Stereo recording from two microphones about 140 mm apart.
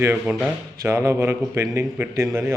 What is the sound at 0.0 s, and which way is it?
A man's voice, 15° right (ahead or behind).